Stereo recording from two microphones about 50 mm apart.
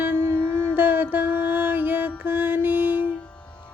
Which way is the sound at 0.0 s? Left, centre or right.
Right.